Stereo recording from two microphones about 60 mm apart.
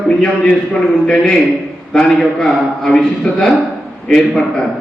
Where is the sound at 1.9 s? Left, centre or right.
Centre.